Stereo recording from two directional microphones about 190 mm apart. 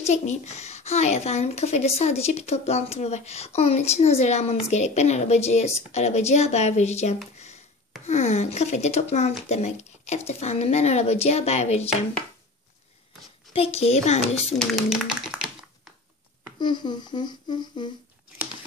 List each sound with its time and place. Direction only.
0.0 s speech: 35° left (ahead or behind)
7.3 s a sound: 35° left (ahead or behind)
8.1 s speech: 35° left (ahead or behind)
13.5 s a woman's voice: 30° left (ahead or behind)
14.6 s a sound: centre (ahead or behind)
16.5 s humming: 25° left (ahead or behind)